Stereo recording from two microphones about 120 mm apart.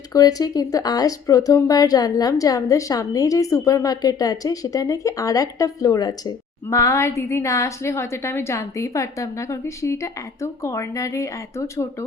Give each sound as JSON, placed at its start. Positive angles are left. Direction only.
{"t": 0.1, "sound": "speech", "side_deg": 30}